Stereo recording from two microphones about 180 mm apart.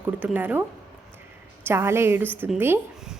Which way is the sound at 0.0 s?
10° right (ahead or behind).